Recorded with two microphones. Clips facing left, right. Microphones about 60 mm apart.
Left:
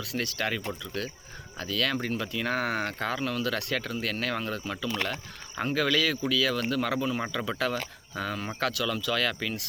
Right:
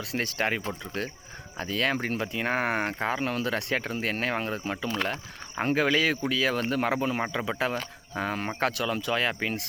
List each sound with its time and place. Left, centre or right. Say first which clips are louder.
0.0 s speech: right 2 dB; right